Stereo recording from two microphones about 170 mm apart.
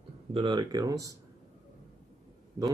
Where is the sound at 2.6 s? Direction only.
20° right (ahead or behind).